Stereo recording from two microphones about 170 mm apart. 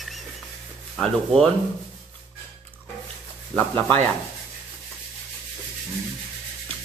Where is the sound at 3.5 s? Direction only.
10° left (ahead or behind).